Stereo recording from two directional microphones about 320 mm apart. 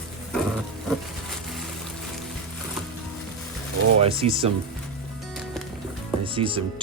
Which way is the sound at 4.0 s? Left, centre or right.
Centre.